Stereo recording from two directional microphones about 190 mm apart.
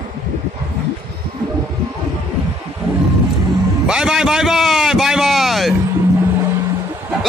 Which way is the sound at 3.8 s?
5° right (ahead or behind).